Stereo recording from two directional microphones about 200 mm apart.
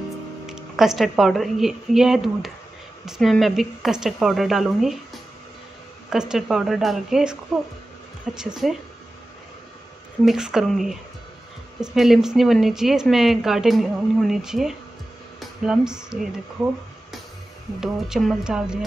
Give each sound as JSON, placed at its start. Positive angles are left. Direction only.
{"t": 0.5, "sound": "speech", "side_deg": 0}
{"t": 6.0, "sound": "speech", "side_deg": -5}
{"t": 8.4, "sound": "speech", "side_deg": 0}
{"t": 10.2, "sound": "speech", "side_deg": -5}
{"t": 17.7, "sound": "speech", "side_deg": 0}